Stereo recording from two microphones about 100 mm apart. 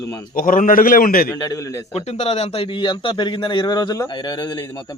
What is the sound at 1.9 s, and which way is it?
A man's voice, 90° left.